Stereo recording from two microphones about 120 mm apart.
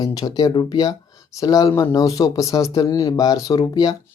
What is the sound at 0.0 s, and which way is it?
Speech, 30° left (ahead or behind).